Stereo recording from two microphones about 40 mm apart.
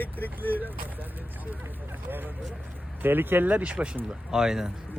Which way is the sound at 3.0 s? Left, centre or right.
Right.